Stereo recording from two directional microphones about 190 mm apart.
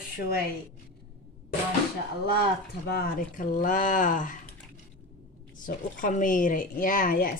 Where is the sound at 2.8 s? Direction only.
50° left (ahead or behind).